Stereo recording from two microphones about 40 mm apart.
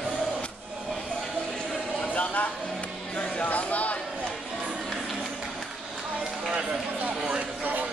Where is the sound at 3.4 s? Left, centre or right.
Left.